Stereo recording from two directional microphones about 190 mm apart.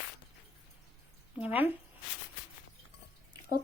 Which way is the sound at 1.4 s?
10° right (ahead or behind).